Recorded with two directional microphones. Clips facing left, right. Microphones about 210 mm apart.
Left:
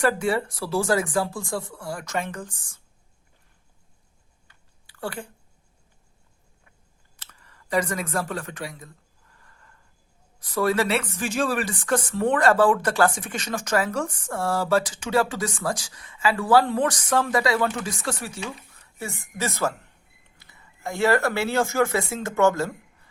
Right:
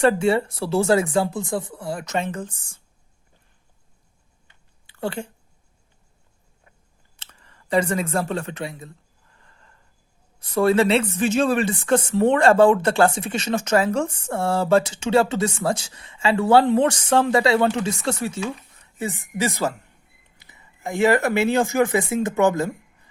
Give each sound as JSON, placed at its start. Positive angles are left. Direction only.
{"t": 0.0, "sound": "speech", "side_deg": -25}
{"t": 4.4, "sound": "a sound", "side_deg": -20}
{"t": 7.2, "sound": "speech", "side_deg": -25}
{"t": 9.4, "sound": "gasp", "side_deg": -25}
{"t": 10.4, "sound": "speech", "side_deg": -25}